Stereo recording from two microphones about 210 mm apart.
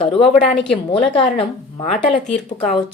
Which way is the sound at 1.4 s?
30° left (ahead or behind).